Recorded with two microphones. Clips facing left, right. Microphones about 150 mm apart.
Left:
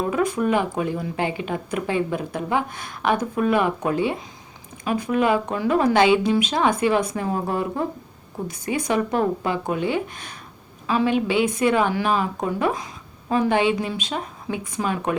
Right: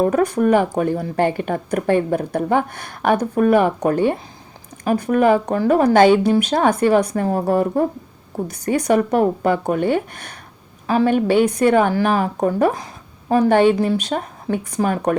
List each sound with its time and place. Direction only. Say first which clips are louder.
0.0 s a woman's voice: right 6 dB; 45° right (ahead or behind)
10.8 s a woman's voice: right 5 dB; 45° right (ahead or behind)